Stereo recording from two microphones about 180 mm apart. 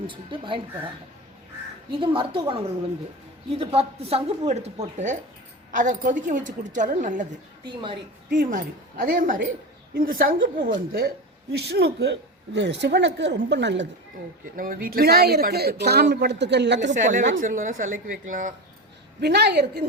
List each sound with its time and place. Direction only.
0.1 s a woman's voice: 30° right (ahead or behind)
2.0 s a woman's voice: 30° right (ahead or behind); by 7.3 s 45° right (ahead or behind)
7.6 s a woman's voice: 25° right (ahead or behind)
8.3 s a woman's voice: 50° right (ahead or behind)
11.5 s speech: 65° right (ahead or behind)
12.5 s a woman's voice: 75° right (ahead or behind)
14.4 s speech: 50° right (ahead or behind); by 16.9 s 75° right (ahead or behind)
16.9 s a woman's voice: 45° right (ahead or behind)
19.2 s speech: 65° right (ahead or behind)